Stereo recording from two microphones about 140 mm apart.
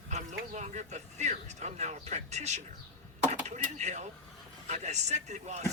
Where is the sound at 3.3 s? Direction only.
55° right (ahead or behind).